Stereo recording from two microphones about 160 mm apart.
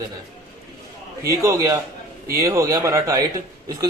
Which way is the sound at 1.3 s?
20° right (ahead or behind).